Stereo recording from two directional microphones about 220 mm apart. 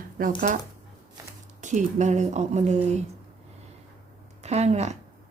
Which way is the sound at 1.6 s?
35° right (ahead or behind).